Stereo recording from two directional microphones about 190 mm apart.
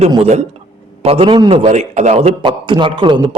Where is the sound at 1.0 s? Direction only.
30° right (ahead or behind).